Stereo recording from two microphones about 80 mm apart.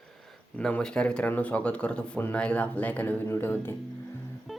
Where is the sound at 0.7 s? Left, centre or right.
Centre.